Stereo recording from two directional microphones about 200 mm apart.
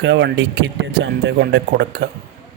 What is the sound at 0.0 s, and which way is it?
Speech, 60° right (ahead or behind).